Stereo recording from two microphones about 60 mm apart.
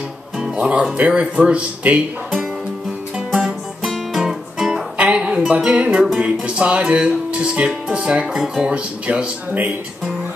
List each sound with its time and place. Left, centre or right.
0.6 s speech: centre
0.9 s music: right
3.3 s music: centre
4.9 s a sound: right
6.1 s music: centre
8.3 s speech: centre
8.6 s music: centre